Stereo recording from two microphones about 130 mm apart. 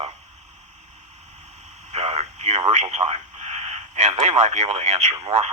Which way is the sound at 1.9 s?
60° right (ahead or behind).